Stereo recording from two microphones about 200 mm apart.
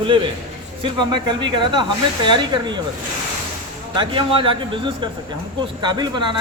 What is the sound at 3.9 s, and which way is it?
Speech, 25° right (ahead or behind).